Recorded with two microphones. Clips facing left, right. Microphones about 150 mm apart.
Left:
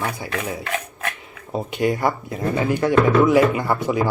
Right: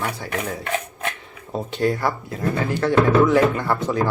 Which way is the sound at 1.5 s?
10° left (ahead or behind).